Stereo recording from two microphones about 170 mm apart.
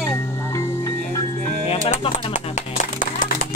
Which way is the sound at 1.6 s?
35° left (ahead or behind).